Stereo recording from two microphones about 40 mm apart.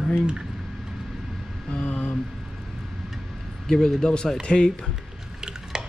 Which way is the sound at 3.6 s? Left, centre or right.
Centre.